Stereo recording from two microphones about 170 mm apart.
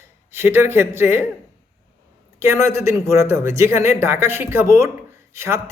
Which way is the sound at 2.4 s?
15° right (ahead or behind).